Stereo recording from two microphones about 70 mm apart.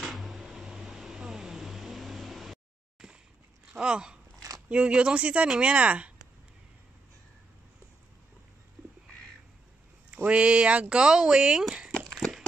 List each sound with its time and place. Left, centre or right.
0.0 s arrow: centre
3.0 s a sound: centre
3.7 s biting: centre
4.6 s speech: centre
10.1 s speech: centre